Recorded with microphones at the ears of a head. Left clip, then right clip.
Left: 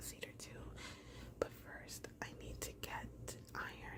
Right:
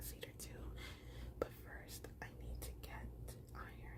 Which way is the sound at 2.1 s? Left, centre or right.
Left.